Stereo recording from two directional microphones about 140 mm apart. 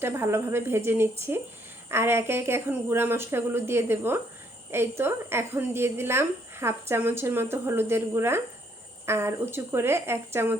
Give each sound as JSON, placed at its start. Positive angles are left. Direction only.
{"t": 0.0, "sound": "a woman's voice", "side_deg": -20}